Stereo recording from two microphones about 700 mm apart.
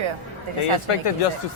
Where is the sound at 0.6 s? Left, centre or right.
Left.